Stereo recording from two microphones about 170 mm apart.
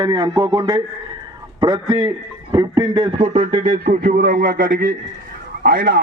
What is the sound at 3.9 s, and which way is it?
A man's voice, 60° right (ahead or behind).